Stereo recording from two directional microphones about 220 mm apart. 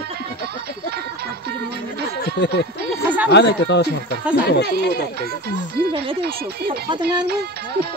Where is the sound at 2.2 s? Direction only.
50° left (ahead or behind).